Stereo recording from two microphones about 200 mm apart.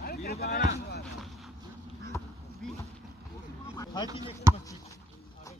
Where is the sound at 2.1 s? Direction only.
15° left (ahead or behind).